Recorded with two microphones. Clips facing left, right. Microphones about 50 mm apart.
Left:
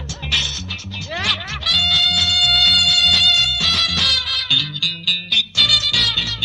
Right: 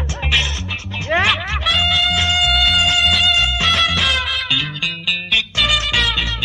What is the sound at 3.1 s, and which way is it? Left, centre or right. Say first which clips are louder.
Music: right 1 dB; right.